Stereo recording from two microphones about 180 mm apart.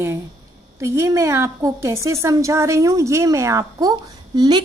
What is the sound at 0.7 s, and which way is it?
A woman's voice, 15° right (ahead or behind).